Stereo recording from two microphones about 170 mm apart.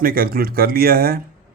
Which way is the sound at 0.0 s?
60° right (ahead or behind).